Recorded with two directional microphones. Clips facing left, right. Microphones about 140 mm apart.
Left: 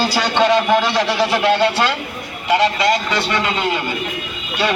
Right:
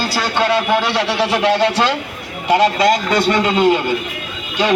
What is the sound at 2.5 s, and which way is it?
A man's voice, 40° right (ahead or behind).